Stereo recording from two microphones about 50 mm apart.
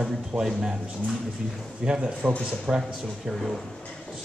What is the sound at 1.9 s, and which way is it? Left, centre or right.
Speech, centre.